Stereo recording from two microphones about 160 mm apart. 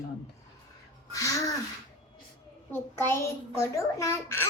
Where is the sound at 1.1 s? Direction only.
20° left (ahead or behind).